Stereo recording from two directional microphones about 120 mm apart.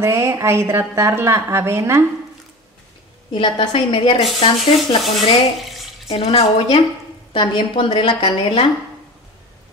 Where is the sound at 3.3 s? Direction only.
50° left (ahead or behind).